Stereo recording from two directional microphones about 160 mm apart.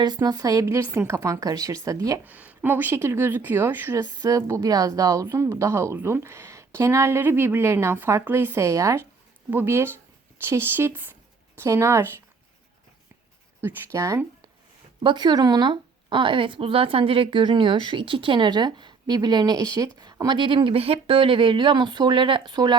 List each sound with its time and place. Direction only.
0.0 s speech: 25° right (ahead or behind)
2.2 s speech: 10° right (ahead or behind)
13.6 s speech: 15° right (ahead or behind)